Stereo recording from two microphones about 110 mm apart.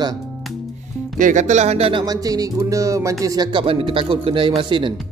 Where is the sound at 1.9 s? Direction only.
35° right (ahead or behind).